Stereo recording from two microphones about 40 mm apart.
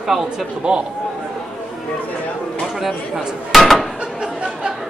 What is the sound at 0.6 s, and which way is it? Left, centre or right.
Speech, right.